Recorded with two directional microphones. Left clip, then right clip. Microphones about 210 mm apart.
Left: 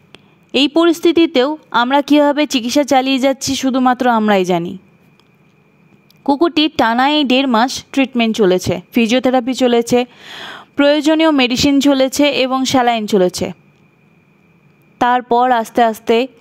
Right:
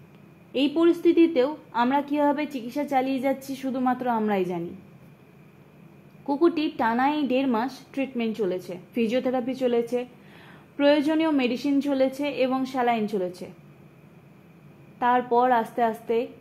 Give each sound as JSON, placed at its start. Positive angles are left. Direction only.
{"t": 0.5, "sound": "a woman's voice", "side_deg": 55}
{"t": 6.2, "sound": "a woman's voice", "side_deg": 50}
{"t": 15.0, "sound": "a woman's voice", "side_deg": 55}